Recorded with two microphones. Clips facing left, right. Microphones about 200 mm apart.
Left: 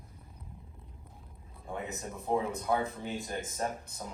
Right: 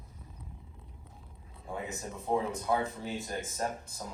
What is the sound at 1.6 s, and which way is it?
Speech, centre (ahead or behind).